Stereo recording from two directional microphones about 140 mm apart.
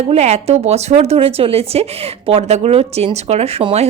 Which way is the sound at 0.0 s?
50° right (ahead or behind).